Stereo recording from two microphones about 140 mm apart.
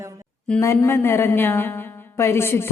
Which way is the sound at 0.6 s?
20° left (ahead or behind).